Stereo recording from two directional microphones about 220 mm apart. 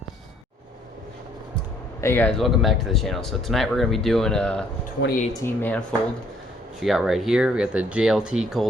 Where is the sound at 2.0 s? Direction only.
10° left (ahead or behind).